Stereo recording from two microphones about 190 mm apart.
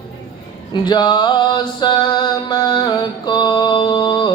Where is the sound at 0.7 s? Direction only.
25° left (ahead or behind).